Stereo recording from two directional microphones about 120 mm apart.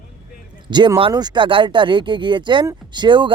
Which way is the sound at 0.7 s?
40° right (ahead or behind).